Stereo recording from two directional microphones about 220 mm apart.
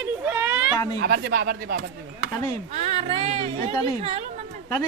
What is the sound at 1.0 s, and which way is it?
Speech, 45° right (ahead or behind).